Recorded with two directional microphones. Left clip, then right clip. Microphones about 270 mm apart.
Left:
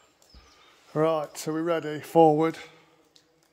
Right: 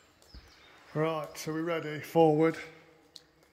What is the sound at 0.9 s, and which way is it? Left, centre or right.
Speech, left.